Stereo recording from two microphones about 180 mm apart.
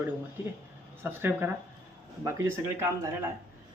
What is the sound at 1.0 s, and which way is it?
Speech, 10° right (ahead or behind).